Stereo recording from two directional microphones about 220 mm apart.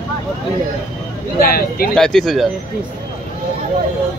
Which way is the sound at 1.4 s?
40° left (ahead or behind).